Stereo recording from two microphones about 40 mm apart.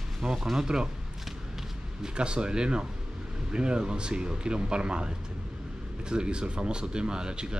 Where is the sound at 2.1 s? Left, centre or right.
Right.